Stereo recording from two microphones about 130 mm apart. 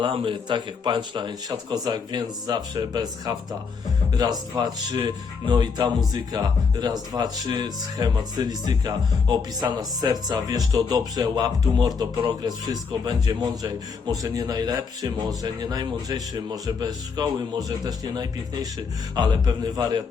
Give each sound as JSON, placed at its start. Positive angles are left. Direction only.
{"t": 0.0, "sound": "a man's voice", "side_deg": -45}